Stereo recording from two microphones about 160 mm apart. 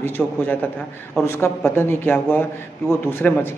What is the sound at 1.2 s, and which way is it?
A man's voice, 15° left (ahead or behind).